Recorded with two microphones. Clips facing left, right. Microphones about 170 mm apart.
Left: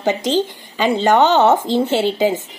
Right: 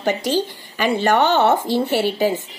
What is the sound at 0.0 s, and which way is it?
Speech, 20° left (ahead or behind).